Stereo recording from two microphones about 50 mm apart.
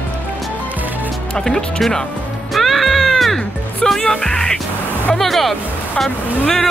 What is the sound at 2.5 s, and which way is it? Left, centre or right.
Music, centre.